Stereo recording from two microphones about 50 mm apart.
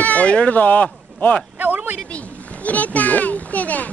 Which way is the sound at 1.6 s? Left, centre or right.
Right.